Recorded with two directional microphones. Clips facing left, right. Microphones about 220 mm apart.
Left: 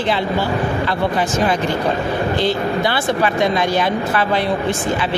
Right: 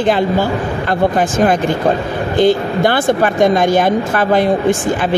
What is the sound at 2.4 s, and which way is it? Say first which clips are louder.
Speech: right 11 dB; 50° right (ahead or behind).